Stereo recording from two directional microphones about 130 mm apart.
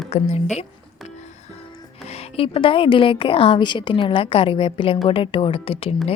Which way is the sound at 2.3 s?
45° left (ahead or behind).